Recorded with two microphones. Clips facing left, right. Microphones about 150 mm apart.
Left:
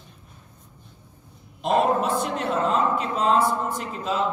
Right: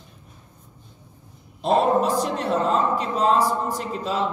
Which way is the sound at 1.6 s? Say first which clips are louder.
Right 2 dB; 35° right (ahead or behind).